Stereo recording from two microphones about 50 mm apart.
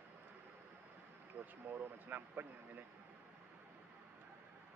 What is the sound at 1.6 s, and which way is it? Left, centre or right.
Speech, right.